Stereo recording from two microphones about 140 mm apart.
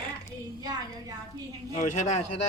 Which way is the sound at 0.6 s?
25° right (ahead or behind).